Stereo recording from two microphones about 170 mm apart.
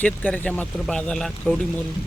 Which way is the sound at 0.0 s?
10° left (ahead or behind).